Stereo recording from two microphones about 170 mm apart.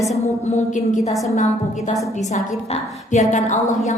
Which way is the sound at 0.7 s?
45° left (ahead or behind).